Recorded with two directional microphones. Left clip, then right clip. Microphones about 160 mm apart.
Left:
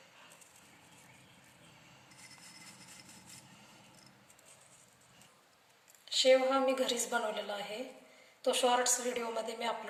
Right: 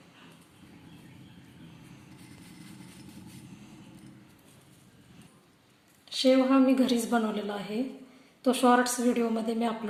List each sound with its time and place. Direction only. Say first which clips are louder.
6.1 s a woman's voice: right 3 dB; 30° right (ahead or behind)
8.4 s a woman's voice: right 6 dB; 35° right (ahead or behind)